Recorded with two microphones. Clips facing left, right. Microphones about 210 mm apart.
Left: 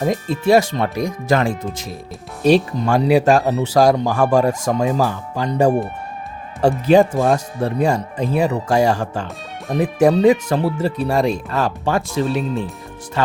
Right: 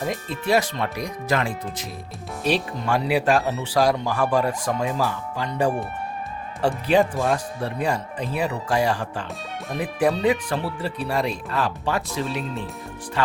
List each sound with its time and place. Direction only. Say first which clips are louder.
0.0 s speech: left 8 dB; 45° left (ahead or behind)
2.4 s speech: left 9 dB; 45° left (ahead or behind)